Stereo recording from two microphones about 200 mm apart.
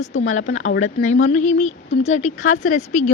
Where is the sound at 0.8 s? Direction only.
35° left (ahead or behind).